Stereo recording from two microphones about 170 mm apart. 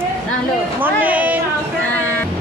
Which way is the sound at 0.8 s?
10° right (ahead or behind).